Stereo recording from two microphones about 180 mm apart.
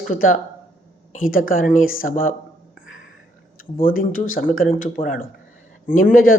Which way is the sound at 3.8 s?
50° left (ahead or behind).